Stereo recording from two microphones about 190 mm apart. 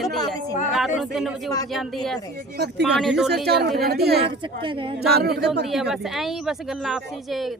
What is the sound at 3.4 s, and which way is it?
Speech, 55° right (ahead or behind).